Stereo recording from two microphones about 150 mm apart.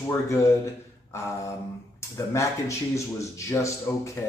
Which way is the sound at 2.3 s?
20° left (ahead or behind).